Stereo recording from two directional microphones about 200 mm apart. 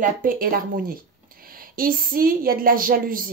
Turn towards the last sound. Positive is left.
turn(degrees=-45)  # may be behind; listen again after turning